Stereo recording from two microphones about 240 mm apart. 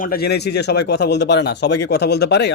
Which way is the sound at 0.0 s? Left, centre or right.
Left.